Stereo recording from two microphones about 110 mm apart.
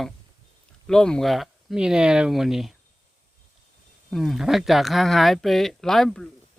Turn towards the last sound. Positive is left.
turn(degrees=5)  # may be behind; listen again after turning